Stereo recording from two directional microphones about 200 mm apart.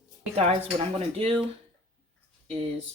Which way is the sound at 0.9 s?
30° right (ahead or behind).